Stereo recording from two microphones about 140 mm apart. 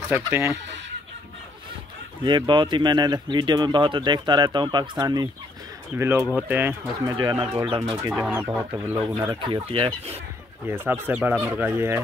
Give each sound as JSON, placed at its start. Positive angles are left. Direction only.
{"t": 0.1, "sound": "speech", "side_deg": -15}
{"t": 2.2, "sound": "speech", "side_deg": -35}
{"t": 7.1, "sound": "speech", "side_deg": -25}
{"t": 7.6, "sound": "speech", "side_deg": -40}
{"t": 8.1, "sound": "speech", "side_deg": -10}
{"t": 9.3, "sound": "speech", "side_deg": -35}
{"t": 10.7, "sound": "speech", "side_deg": -15}